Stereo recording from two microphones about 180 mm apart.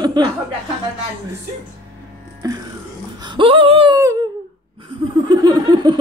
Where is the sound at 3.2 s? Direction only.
30° right (ahead or behind).